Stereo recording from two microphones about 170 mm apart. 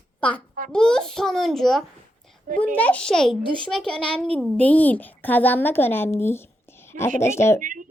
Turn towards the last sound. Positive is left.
turn(degrees=-50)  # may be behind; listen again after turning